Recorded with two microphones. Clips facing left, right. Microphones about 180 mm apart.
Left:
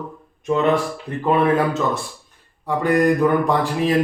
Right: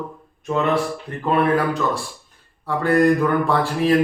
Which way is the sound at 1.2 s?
20° left (ahead or behind).